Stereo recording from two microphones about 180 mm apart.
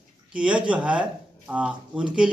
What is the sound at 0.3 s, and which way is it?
A man's voice, 5° right (ahead or behind).